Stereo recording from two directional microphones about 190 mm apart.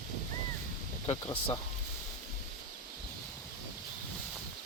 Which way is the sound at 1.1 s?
25° left (ahead or behind).